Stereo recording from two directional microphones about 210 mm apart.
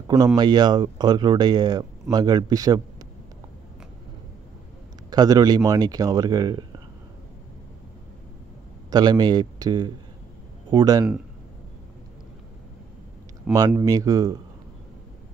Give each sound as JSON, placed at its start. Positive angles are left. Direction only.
{"t": 0.4, "sound": "speech", "side_deg": -20}
{"t": 5.1, "sound": "speech", "side_deg": -20}
{"t": 8.9, "sound": "speech", "side_deg": -20}
{"t": 13.5, "sound": "speech", "side_deg": -15}